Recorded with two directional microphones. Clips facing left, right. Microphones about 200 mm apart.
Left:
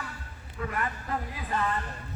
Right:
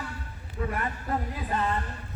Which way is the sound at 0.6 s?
30° right (ahead or behind).